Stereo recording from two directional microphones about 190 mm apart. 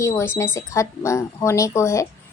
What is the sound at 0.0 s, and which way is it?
Speech, 15° left (ahead or behind).